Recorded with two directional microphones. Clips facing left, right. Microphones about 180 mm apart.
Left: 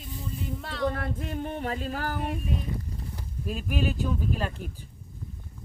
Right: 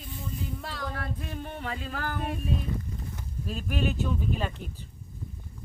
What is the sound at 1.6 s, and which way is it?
Speech, 40° left (ahead or behind).